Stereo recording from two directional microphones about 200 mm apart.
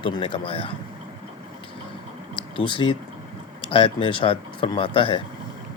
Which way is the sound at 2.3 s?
25° left (ahead or behind).